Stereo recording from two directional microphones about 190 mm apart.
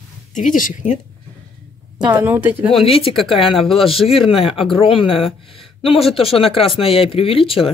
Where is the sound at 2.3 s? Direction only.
10° right (ahead or behind).